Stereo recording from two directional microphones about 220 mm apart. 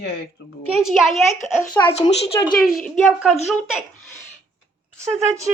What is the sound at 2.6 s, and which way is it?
Child singing, centre (ahead or behind).